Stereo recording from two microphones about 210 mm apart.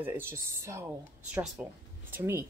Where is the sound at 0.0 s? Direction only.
10° right (ahead or behind).